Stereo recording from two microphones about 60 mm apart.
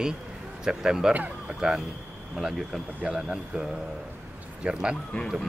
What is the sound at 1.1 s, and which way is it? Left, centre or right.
Speech, right.